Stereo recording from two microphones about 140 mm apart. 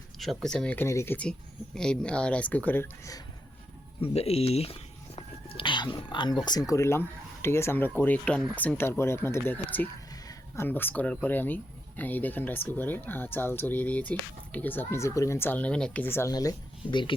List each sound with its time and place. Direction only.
0.2 s speech: centre (ahead or behind)
4.0 s speech: 45° left (ahead or behind); by 16.3 s 15° left (ahead or behind)
16.3 s speech: 25° left (ahead or behind)